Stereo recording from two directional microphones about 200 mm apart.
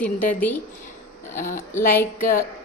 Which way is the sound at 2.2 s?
45° left (ahead or behind).